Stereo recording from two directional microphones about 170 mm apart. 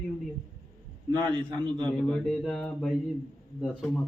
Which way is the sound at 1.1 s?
25° right (ahead or behind).